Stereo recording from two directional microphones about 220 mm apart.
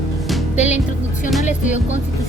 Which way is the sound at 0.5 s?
30° left (ahead or behind).